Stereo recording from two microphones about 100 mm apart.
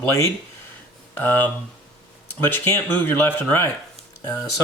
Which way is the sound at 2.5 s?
20° left (ahead or behind).